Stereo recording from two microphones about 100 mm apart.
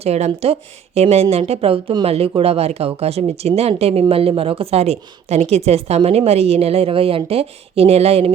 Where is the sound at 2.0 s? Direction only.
80° right.